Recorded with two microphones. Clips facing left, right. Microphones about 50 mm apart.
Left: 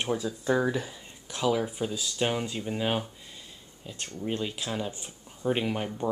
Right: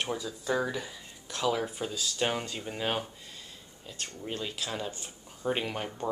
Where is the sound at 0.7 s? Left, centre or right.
Left.